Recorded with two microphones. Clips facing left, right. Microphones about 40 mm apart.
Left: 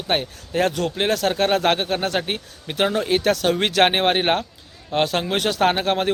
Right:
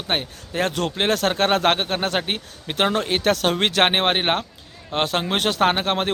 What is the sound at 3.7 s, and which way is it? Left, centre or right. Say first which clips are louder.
Speech: left 3 dB; right.